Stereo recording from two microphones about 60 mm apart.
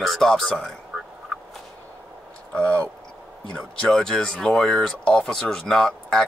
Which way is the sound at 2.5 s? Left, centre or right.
Left.